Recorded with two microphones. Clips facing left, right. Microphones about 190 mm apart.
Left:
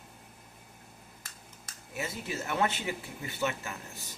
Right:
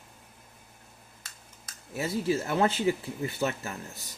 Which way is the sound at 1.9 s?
35° right (ahead or behind).